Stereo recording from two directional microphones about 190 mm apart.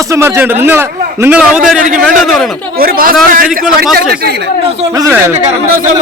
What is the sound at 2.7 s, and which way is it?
A man's voice, 50° right (ahead or behind).